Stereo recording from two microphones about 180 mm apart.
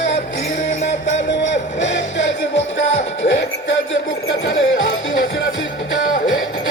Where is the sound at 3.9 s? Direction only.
90° left.